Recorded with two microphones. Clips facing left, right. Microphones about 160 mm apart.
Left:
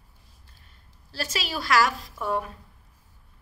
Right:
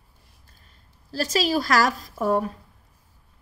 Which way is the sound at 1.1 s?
40° right (ahead or behind).